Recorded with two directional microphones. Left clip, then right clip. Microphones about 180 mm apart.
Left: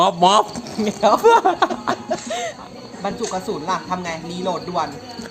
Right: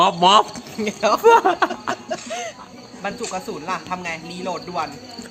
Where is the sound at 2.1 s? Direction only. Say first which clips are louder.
Left 3 dB; 15° left (ahead or behind).